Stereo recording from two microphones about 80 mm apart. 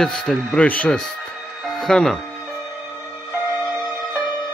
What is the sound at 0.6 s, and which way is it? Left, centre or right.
Speech, centre.